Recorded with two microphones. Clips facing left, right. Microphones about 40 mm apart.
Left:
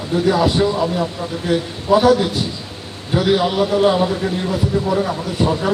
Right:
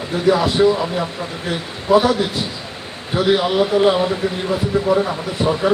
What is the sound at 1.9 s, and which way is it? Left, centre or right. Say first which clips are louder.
Speech: right 1 dB; centre.